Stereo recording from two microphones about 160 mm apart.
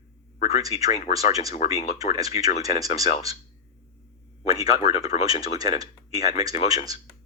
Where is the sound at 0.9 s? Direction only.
40° left (ahead or behind).